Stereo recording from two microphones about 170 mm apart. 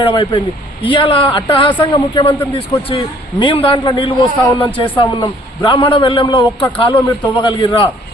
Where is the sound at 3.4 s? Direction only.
30° left (ahead or behind).